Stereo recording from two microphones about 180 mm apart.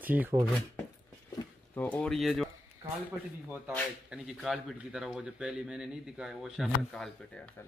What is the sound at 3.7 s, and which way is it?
Speech, centre (ahead or behind).